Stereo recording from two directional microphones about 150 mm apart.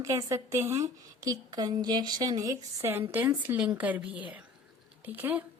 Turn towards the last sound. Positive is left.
turn(degrees=-10)  # may be behind; listen again after turning